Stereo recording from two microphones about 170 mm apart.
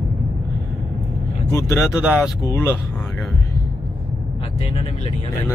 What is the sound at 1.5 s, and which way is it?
Vehicle, 15° left (ahead or behind).